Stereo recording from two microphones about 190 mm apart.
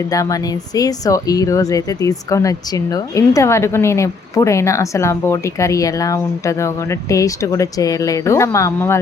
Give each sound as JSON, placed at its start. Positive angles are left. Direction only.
{"t": 0.1, "sound": "speech", "side_deg": 20}